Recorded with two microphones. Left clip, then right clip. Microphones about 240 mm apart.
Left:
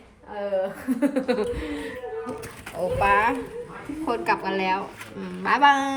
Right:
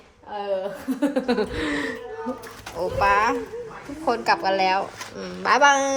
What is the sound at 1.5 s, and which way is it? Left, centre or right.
Speech, right.